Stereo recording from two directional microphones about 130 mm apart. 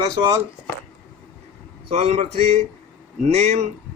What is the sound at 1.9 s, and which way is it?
Speech, 55° right (ahead or behind).